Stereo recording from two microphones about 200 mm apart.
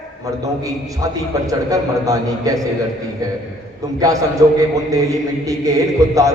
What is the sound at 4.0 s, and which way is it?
A man's voice, 15° right (ahead or behind).